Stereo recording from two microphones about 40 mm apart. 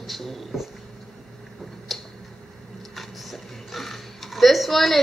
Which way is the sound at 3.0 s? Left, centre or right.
Centre.